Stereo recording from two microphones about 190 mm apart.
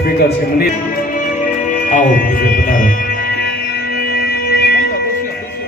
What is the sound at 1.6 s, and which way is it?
Music, 45° left (ahead or behind).